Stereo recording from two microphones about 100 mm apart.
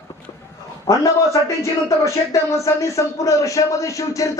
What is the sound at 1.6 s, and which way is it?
Speech, 30° left (ahead or behind).